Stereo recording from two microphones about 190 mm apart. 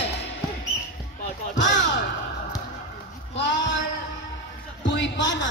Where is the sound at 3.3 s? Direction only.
70° left (ahead or behind).